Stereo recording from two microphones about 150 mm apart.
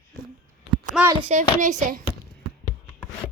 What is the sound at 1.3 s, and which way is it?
Speech, 55° right (ahead or behind).